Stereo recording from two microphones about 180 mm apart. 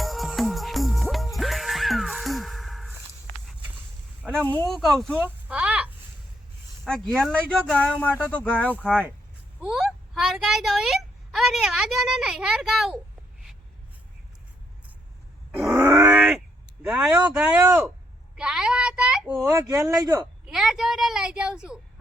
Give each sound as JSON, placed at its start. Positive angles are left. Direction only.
{"t": 0.0, "sound": "music", "side_deg": 0}
{"t": 4.3, "sound": "speech", "side_deg": 5}
{"t": 5.2, "sound": "a sound", "side_deg": -5}
{"t": 6.8, "sound": "speech", "side_deg": 0}
{"t": 8.9, "sound": "speech", "side_deg": -5}
{"t": 9.6, "sound": "a sound", "side_deg": -5}
{"t": 15.6, "sound": "groan", "side_deg": -15}
{"t": 16.8, "sound": "speech", "side_deg": -5}
{"t": 18.3, "sound": "a sound", "side_deg": -5}
{"t": 19.5, "sound": "speech", "side_deg": -15}
{"t": 20.4, "sound": "a child's voice", "side_deg": -5}